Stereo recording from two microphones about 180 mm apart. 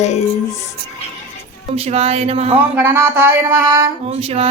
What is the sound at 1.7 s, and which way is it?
Speech, 35° right (ahead or behind).